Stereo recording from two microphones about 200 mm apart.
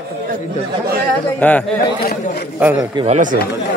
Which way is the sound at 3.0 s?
40° right (ahead or behind).